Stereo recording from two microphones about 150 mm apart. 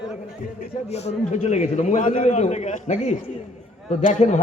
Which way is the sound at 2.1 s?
45° left (ahead or behind).